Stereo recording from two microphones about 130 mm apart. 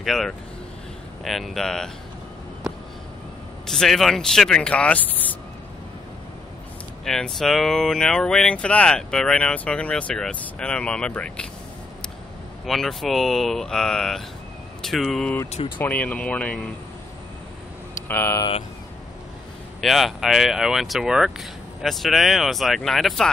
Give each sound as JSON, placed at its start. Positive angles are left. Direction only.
{"t": 0.0, "sound": "speech", "side_deg": 0}
{"t": 3.6, "sound": "speech", "side_deg": 5}
{"t": 7.1, "sound": "speech", "side_deg": 5}
{"t": 12.6, "sound": "speech", "side_deg": 0}
{"t": 18.0, "sound": "speech", "side_deg": 15}
{"t": 19.8, "sound": "speech", "side_deg": 0}